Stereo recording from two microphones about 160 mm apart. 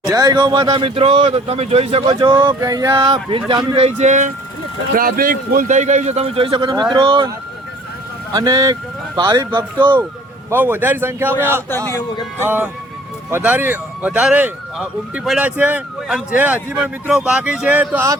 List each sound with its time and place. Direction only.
0.0 s speech: 25° right (ahead or behind); by 4.3 s 50° right (ahead or behind)
4.9 s a man's voice: 60° right (ahead or behind); by 7.3 s 30° right (ahead or behind)
8.3 s speech: 25° right (ahead or behind)
10.5 s speech: 15° right (ahead or behind)